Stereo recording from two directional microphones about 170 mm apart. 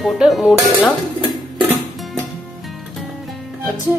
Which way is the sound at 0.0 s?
Centre (ahead or behind).